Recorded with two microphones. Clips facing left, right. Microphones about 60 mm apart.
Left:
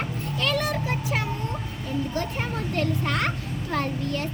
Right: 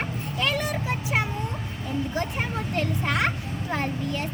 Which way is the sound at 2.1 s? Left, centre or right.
Centre.